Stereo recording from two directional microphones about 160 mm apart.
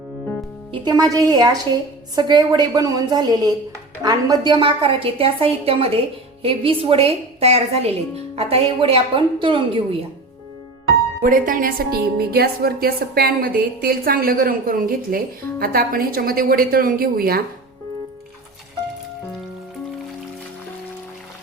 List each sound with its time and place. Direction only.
0.7 s a woman's voice: 25° right (ahead or behind)
11.2 s speech: 60° right (ahead or behind)
12.1 s speech: 75° right (ahead or behind)